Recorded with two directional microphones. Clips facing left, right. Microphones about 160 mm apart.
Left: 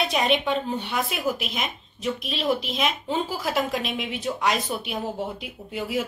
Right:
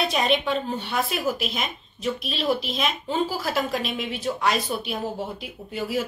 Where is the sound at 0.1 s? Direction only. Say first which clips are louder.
Even; 15° left (ahead or behind).